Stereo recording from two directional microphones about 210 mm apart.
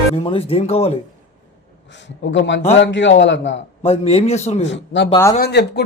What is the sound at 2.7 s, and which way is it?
Speech, 60° left (ahead or behind).